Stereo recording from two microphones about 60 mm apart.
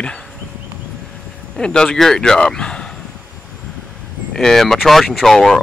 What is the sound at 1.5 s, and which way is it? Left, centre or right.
Speech, centre.